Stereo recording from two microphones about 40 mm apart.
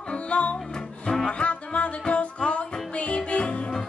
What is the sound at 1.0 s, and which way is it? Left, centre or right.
Music, centre.